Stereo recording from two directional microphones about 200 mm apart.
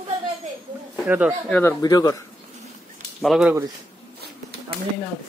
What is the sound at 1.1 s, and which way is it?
Speech, 5° right (ahead or behind).